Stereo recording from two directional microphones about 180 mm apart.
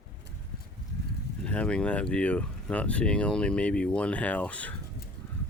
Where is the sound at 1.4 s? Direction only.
5° left (ahead or behind).